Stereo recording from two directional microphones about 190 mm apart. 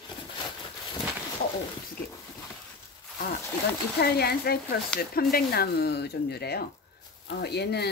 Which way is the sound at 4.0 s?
55° left (ahead or behind).